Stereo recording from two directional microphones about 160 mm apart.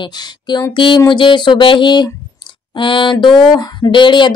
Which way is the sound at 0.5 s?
30° left (ahead or behind).